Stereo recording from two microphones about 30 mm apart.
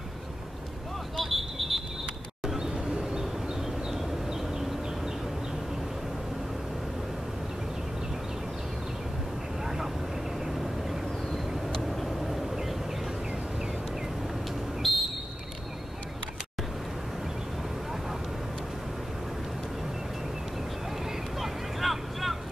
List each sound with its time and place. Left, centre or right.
1.1 s vehicle: centre
2.6 s a sound: right
10.4 s vehicle: centre
11.9 s vehicle: centre
14.8 s a sound: centre
21.4 s vehicle: centre